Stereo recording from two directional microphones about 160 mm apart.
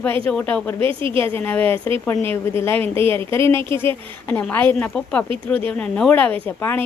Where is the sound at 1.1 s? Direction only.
15° left (ahead or behind).